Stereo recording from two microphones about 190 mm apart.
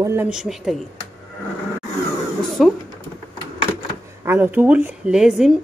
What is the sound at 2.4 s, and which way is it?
Speech, centre (ahead or behind).